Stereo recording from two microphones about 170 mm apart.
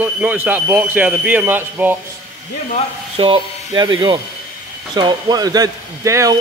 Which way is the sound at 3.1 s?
30° right (ahead or behind).